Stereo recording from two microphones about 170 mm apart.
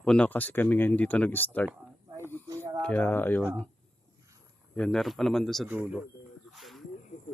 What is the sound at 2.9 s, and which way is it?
Speech, 10° left (ahead or behind).